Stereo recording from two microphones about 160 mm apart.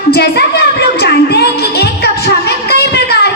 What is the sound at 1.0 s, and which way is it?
Music, 90° left.